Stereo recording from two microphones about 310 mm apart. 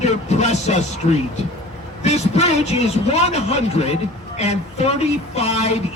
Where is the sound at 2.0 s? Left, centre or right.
Left.